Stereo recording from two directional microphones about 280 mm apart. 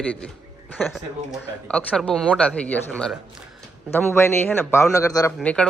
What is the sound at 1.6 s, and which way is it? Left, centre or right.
A man's voice, centre.